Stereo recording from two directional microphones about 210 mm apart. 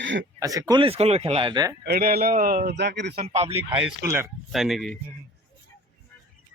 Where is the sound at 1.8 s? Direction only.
50° right (ahead or behind).